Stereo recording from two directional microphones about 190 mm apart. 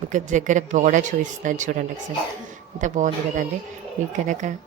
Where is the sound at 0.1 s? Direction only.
40° right (ahead or behind).